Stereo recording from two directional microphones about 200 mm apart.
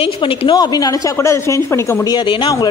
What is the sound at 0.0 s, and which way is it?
A woman's voice, 25° left (ahead or behind).